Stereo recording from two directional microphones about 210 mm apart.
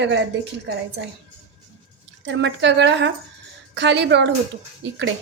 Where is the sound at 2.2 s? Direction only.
60° right (ahead or behind).